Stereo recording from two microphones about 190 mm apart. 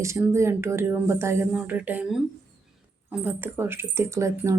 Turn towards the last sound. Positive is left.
turn(degrees=-15)  # may be behind; listen again after turning